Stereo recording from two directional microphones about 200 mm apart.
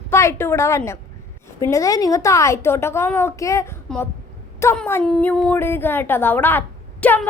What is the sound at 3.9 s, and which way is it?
A woman's voice, 5° left (ahead or behind).